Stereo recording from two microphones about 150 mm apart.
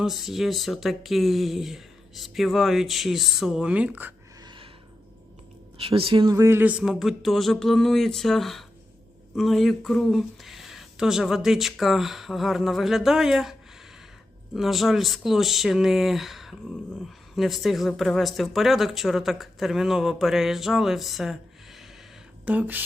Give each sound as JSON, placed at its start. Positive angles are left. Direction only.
{"t": 0.0, "sound": "speech", "side_deg": 0}
{"t": 4.4, "sound": "a sound", "side_deg": -30}
{"t": 5.8, "sound": "speech", "side_deg": -40}